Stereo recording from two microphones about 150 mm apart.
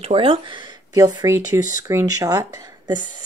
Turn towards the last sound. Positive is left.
turn(degrees=-25)  # may be behind; listen again after turning